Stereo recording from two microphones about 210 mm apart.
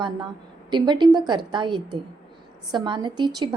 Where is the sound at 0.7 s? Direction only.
20° right (ahead or behind).